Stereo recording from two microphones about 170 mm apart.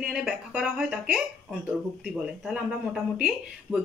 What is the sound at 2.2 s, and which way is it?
Speech, 5° right (ahead or behind).